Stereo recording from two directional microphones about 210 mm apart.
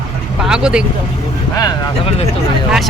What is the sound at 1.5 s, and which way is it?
Speech, 20° left (ahead or behind).